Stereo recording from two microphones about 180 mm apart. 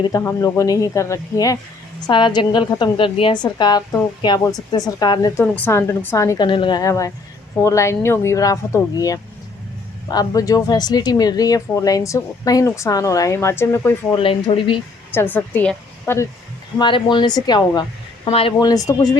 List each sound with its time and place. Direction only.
0.1 s a woman's voice: 15° left (ahead or behind)
5.4 s a woman's voice: 10° left (ahead or behind)
14.2 s speech: 30° left (ahead or behind)
15.1 s a woman's voice: 10° left (ahead or behind)
16.7 s speech: 25° left (ahead or behind)